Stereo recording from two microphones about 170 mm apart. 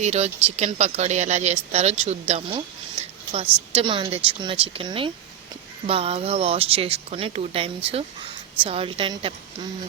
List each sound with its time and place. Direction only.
0.0 s speech: 40° right (ahead or behind)
3.8 s speech: 30° right (ahead or behind)